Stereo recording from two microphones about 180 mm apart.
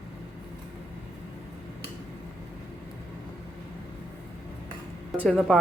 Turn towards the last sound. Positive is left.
turn(degrees=5)  # may be behind; listen again after turning